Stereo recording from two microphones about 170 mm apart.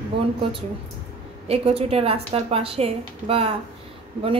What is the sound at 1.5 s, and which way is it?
A woman's voice, 35° right (ahead or behind).